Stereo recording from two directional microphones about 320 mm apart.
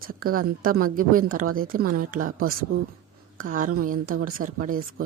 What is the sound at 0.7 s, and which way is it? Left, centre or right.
A woman's voice, right.